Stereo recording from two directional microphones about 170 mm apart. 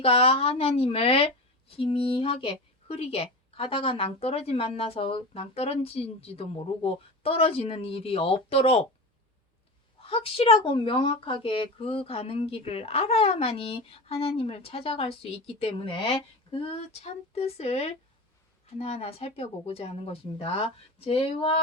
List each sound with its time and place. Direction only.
0.0 s a woman's voice: 35° left (ahead or behind)
10.0 s a woman's voice: 35° left (ahead or behind)